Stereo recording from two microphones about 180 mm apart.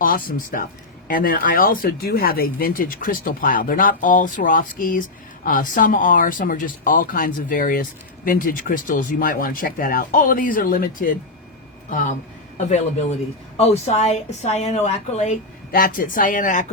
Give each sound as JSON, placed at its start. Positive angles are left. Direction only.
{"t": 0.0, "sound": "a man's voice", "side_deg": 50}